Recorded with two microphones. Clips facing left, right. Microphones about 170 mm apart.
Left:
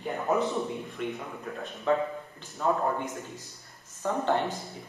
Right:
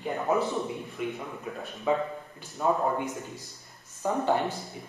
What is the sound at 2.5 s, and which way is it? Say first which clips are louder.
Speech: right 1 dB; 15° right (ahead or behind).